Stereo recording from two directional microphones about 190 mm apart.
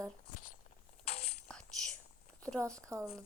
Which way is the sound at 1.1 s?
35° left (ahead or behind).